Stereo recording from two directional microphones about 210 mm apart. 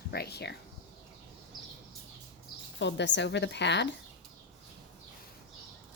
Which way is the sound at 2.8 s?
55° left (ahead or behind).